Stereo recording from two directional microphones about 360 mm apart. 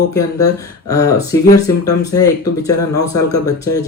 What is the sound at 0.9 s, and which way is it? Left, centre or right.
Speech, centre.